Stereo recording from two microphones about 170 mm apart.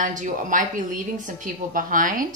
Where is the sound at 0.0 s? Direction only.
50° right (ahead or behind).